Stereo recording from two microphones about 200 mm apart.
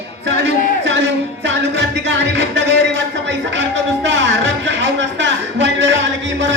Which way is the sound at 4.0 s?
60° right (ahead or behind).